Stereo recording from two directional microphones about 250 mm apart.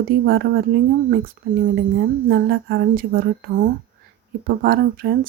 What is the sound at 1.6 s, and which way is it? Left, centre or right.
A woman's voice, right.